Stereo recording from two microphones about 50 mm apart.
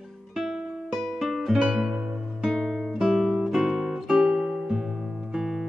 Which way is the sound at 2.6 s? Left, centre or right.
Centre.